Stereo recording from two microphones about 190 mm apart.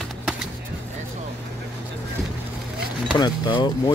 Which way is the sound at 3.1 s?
25° left (ahead or behind).